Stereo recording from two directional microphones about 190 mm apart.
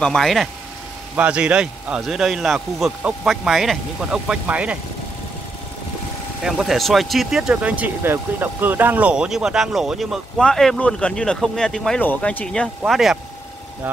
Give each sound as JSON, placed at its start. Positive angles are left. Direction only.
{"t": 0.0, "sound": "speech", "side_deg": 0}
{"t": 6.4, "sound": "speech", "side_deg": 0}